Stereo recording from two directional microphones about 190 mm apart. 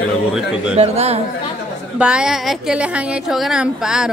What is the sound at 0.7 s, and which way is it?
Speech, 35° right (ahead or behind).